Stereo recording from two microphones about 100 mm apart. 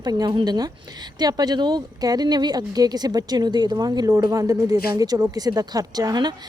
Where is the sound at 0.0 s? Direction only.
40° right (ahead or behind).